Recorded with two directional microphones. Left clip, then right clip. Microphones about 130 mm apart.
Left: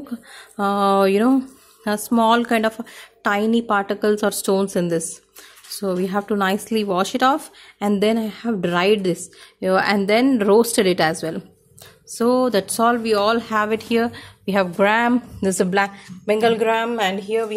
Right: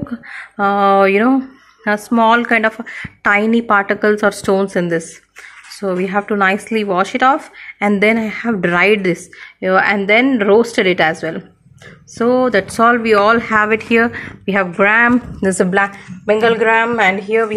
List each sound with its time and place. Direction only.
0.1 s a woman's voice: 35° left (ahead or behind); by 7.7 s 50° left (ahead or behind)
7.8 s speech: 30° left (ahead or behind)
9.6 s speech: 50° left (ahead or behind); by 14.3 s 20° left (ahead or behind)
14.4 s a woman's voice: 35° left (ahead or behind)
16.3 s a woman's voice: 45° left (ahead or behind)
16.9 s speech: 20° left (ahead or behind)